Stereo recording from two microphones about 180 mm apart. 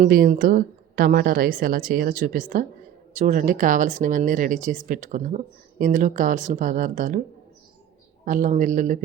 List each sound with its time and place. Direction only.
0.0 s a woman's voice: 50° right (ahead or behind)
8.2 s a woman's voice: 45° right (ahead or behind)